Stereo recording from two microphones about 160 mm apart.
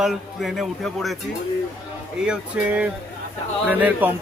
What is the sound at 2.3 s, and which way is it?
Speech, 5° right (ahead or behind).